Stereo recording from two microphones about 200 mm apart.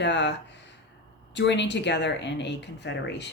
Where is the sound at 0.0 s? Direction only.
60° left (ahead or behind).